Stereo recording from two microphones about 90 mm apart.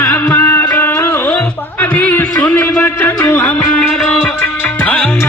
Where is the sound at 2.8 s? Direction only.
20° left (ahead or behind).